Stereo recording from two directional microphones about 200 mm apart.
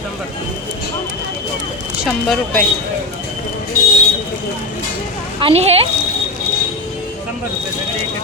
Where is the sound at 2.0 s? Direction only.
Centre (ahead or behind).